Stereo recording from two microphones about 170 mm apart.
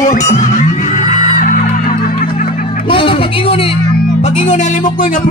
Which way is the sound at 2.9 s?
30° left (ahead or behind).